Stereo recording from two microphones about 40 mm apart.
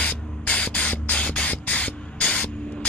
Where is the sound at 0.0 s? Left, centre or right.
Left.